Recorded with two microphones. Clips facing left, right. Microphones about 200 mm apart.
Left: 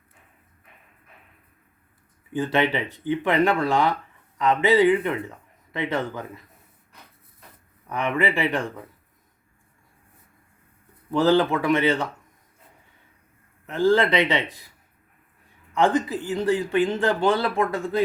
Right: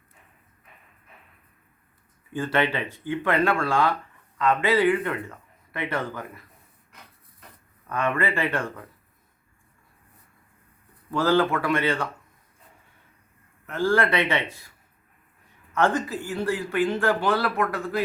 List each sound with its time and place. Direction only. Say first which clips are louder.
2.3 s speech: left 2 dB; 15° left (ahead or behind)
7.9 s speech: left 1 dB; 15° left (ahead or behind)
11.1 s speech: left 2 dB; 20° left (ahead or behind)
13.7 s speech: left 3 dB; 20° left (ahead or behind)
15.7 s speech: left 2 dB; 15° left (ahead or behind)